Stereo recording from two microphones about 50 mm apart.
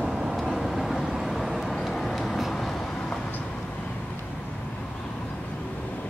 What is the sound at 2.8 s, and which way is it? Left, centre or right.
Vehicle, centre.